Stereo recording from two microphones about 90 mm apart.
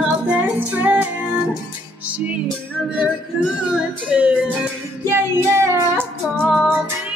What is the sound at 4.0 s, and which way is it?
Music, 15° right (ahead or behind).